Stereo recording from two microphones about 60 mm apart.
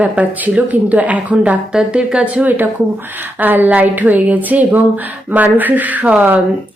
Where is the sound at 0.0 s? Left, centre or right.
Right.